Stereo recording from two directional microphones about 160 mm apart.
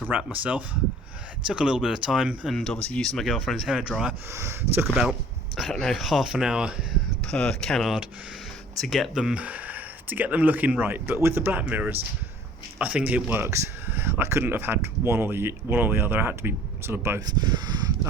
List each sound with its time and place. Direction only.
0.1 s speech: 10° right (ahead or behind)
4.3 s speech: 15° right (ahead or behind)
5.5 s speech: centre (ahead or behind); by 18.1 s 25° right (ahead or behind)